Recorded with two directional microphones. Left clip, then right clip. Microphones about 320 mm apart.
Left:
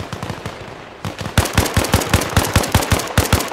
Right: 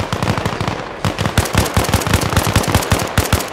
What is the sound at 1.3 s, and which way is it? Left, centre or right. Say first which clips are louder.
Machine gun: left 2 dB; centre.